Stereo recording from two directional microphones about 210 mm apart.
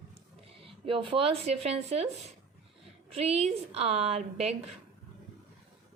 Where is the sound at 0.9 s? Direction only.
25° right (ahead or behind).